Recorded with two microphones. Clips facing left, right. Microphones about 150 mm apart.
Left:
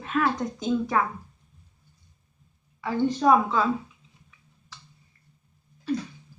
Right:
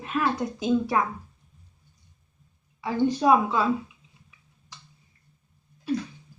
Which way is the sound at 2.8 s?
15° right (ahead or behind).